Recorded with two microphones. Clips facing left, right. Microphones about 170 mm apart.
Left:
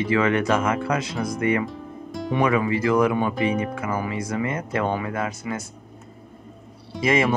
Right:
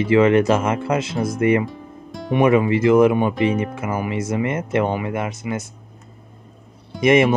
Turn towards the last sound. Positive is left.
turn(degrees=-25)  # may be behind; listen again after turning